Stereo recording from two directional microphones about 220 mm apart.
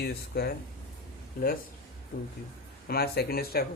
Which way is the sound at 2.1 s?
40° left (ahead or behind).